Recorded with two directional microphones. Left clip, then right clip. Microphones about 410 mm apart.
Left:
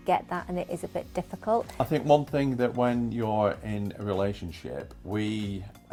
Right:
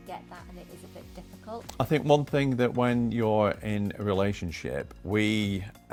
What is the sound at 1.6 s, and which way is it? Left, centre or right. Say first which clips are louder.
Speech: right 3 dB; right.